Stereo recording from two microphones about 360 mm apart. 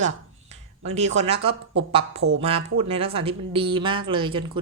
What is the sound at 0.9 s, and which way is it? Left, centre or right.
A woman's voice, centre.